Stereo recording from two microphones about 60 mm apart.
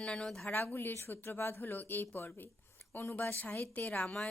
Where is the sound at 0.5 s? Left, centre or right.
Left.